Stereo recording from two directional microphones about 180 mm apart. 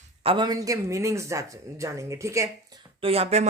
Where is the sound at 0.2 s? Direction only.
30° right (ahead or behind).